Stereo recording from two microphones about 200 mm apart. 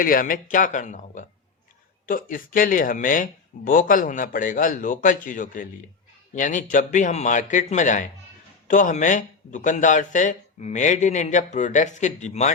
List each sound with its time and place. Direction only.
0.0 s speech: 45° left (ahead or behind)